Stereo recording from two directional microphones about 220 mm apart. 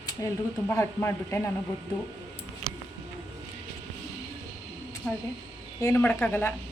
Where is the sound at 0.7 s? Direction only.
10° left (ahead or behind).